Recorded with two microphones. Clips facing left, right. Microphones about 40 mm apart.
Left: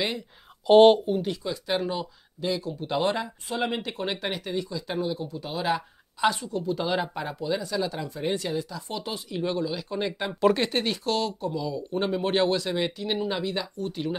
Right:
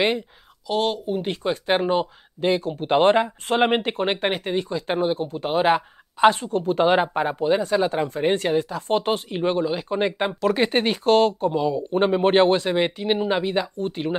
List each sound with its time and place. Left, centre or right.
0.7 s speech: left
1.2 s speech: right